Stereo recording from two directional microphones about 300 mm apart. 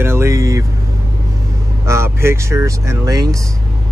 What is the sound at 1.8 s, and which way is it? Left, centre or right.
Speech, centre.